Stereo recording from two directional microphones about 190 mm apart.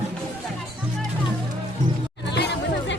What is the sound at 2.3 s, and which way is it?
Music, 65° left (ahead or behind).